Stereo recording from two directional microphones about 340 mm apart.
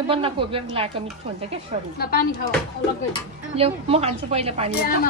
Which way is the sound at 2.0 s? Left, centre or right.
Left.